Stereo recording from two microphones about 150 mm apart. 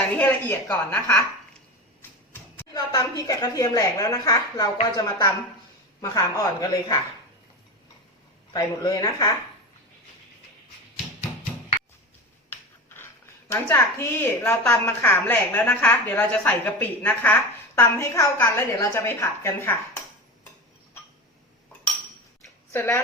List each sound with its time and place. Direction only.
0.2 s a woman's voice: 10° left (ahead or behind)
2.0 s a sound: 15° left (ahead or behind)
2.7 s a woman's voice: 25° left (ahead or behind)
8.5 s a woman's voice: 25° left (ahead or behind)
12.5 s a sound: 15° left (ahead or behind)
13.5 s a woman's voice: 15° left (ahead or behind)
22.7 s speech: 15° left (ahead or behind)